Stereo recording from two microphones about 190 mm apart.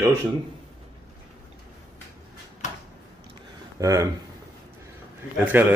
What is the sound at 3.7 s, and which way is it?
Speech, 15° right (ahead or behind).